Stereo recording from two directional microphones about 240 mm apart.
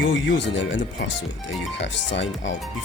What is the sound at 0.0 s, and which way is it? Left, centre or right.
Speech, left.